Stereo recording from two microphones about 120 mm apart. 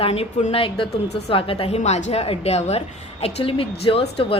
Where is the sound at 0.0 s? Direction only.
55° left (ahead or behind).